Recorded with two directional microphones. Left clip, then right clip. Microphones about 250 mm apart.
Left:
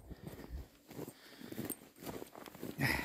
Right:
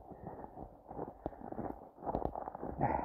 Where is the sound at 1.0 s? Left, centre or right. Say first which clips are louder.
Right 7 dB; left.